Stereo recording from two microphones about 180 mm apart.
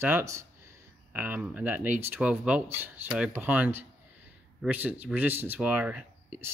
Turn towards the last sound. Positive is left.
turn(degrees=-5)  # may be behind; listen again after turning